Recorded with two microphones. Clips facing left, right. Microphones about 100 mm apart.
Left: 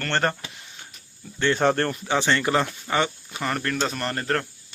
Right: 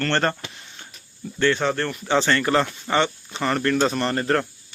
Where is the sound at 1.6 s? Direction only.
50° left (ahead or behind).